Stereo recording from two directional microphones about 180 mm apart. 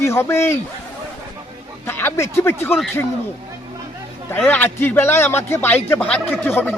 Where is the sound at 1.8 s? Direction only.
10° left (ahead or behind).